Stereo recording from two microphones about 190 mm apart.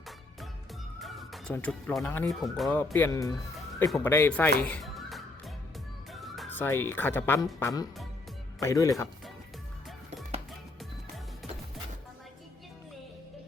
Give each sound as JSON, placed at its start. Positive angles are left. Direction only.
{"t": 0.9, "sound": "music", "side_deg": 0}
{"t": 1.5, "sound": "speech", "side_deg": 5}
{"t": 2.7, "sound": "speech", "side_deg": 10}
{"t": 6.1, "sound": "music", "side_deg": 0}
{"t": 6.6, "sound": "speech", "side_deg": 10}